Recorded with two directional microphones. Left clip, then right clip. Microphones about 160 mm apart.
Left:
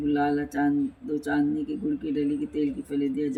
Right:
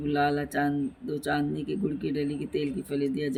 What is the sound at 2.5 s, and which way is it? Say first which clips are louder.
Speech: left 1 dB; 45° right (ahead or behind).